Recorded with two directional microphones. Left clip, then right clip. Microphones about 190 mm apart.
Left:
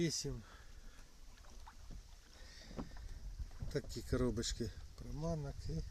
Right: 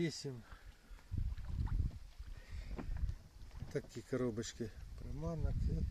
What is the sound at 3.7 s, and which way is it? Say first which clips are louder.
Speech: even; centre (ahead or behind).